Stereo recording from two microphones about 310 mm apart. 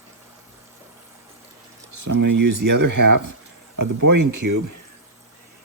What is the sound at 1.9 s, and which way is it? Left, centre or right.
Speech, right.